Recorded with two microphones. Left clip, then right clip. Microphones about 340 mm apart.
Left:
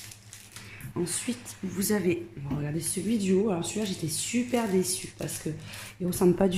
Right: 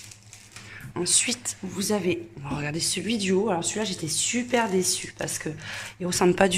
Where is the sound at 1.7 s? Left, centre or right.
Centre.